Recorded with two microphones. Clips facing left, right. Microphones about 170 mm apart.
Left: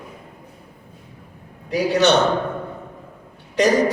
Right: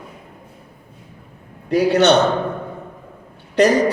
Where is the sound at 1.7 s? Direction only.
65° right (ahead or behind).